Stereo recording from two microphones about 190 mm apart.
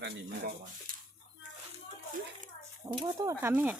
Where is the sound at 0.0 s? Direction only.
60° right (ahead or behind).